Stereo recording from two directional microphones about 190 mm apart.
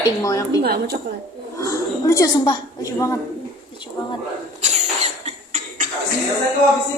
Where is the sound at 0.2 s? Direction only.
20° left (ahead or behind).